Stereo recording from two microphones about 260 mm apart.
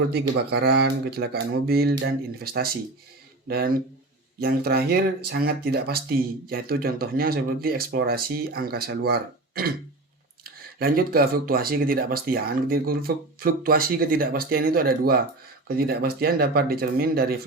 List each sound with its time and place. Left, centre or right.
0.1 s speech: right